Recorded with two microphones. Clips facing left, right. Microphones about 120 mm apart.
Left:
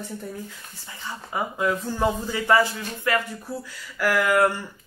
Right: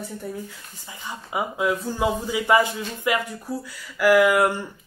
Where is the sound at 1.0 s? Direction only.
10° right (ahead or behind).